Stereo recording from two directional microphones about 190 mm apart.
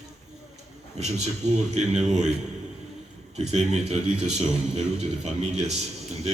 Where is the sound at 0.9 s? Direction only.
35° right (ahead or behind).